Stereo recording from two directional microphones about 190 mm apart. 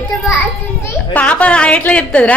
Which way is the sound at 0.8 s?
5° left (ahead or behind).